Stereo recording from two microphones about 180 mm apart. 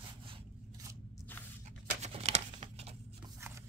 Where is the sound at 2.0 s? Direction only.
35° right (ahead or behind).